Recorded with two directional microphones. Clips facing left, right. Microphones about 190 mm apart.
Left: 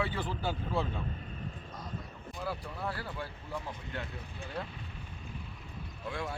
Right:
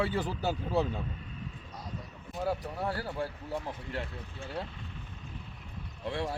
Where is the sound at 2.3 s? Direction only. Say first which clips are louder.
Right 6 dB; 40° right (ahead or behind).